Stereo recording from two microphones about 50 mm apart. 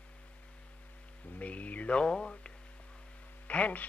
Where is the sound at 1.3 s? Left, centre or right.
Left.